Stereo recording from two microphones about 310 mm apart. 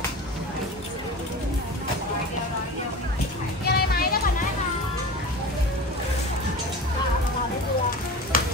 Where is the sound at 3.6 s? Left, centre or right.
Left.